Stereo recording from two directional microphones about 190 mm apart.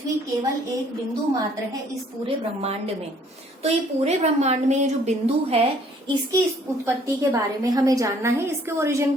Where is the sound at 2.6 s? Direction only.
30° right (ahead or behind).